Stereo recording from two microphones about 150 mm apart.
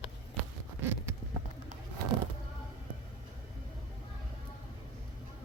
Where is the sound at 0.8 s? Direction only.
15° right (ahead or behind).